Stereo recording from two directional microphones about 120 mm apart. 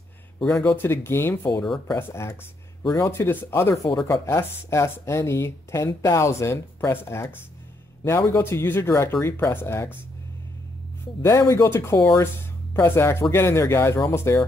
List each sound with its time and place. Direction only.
0.4 s a man's voice: 5° left (ahead or behind)
0.7 s speech: 20° left (ahead or behind)
11.2 s speech: 25° left (ahead or behind)